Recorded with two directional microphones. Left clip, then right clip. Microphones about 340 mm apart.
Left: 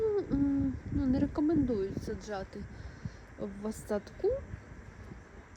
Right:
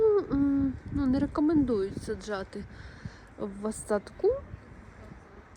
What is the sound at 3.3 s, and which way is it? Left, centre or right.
Speech, right.